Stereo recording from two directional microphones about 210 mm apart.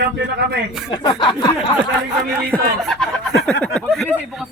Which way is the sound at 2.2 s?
Centre (ahead or behind).